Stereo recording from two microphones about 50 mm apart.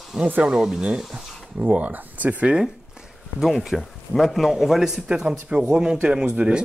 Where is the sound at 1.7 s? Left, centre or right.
Right.